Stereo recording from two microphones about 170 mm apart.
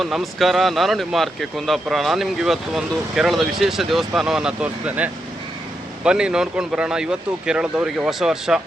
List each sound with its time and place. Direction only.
0.0 s speech: centre (ahead or behind)